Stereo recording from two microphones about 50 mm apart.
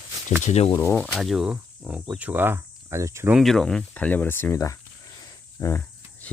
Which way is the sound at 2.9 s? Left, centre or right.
Right.